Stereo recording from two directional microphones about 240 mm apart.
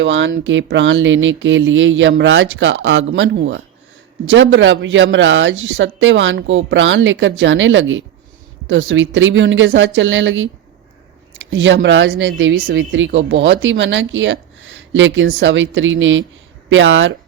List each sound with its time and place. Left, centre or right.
0.0 s speech: right
11.5 s speech: right